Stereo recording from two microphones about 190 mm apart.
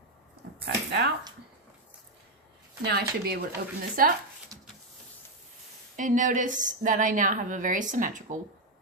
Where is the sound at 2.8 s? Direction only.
55° right (ahead or behind).